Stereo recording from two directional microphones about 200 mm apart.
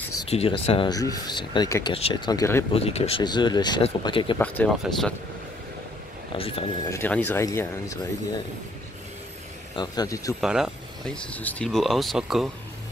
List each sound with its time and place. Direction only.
0.3 s speech: 30° left (ahead or behind)
2.7 s speech: 30° left (ahead or behind)
4.4 s speech: 5° left (ahead or behind)
6.3 s speech: 30° left (ahead or behind)
6.9 s speech: 10° left (ahead or behind)
9.8 s speech: 20° left (ahead or behind)
10.4 s speech: centre (ahead or behind)